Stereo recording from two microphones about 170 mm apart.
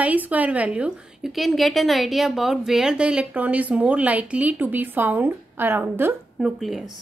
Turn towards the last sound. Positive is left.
turn(degrees=0)  # may be behind; listen again after turning